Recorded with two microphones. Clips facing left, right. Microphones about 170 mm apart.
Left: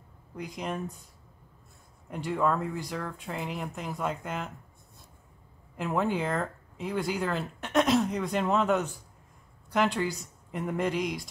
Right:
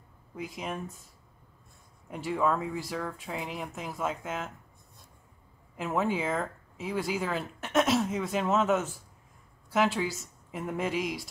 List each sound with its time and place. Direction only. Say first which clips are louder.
0.4 s speech: left 2 dB; centre (ahead or behind)
2.0 s speech: even; centre (ahead or behind)
5.8 s speech: left 1 dB; centre (ahead or behind)